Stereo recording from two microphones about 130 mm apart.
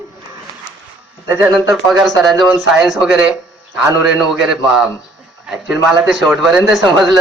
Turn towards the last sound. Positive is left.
turn(degrees=0)  # may be behind; listen again after turning